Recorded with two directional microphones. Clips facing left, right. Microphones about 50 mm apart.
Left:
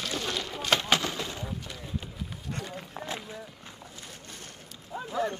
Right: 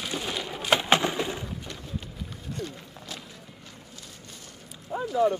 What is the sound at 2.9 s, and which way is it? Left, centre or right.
Run, left.